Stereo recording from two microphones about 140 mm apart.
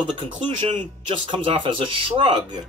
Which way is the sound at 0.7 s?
40° right (ahead or behind).